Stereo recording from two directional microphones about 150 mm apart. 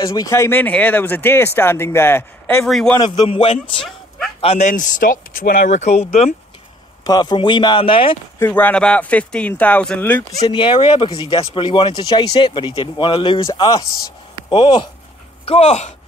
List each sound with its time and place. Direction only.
0.0 s speech: 25° left (ahead or behind)
2.6 s a man's voice: centre (ahead or behind)
3.0 s speech: 30° left (ahead or behind)
4.4 s speech: 45° left (ahead or behind)
7.1 s speech: 30° left (ahead or behind)
8.4 s speech: 10° left (ahead or behind)
10.4 s speech: 35° left (ahead or behind)
15.4 s speech: 45° left (ahead or behind)